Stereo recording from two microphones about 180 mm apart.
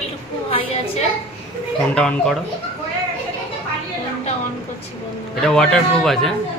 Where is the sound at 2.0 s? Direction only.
5° left (ahead or behind).